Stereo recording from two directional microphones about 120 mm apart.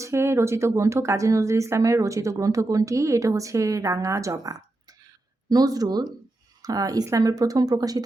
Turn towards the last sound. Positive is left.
turn(degrees=-30)  # may be behind; listen again after turning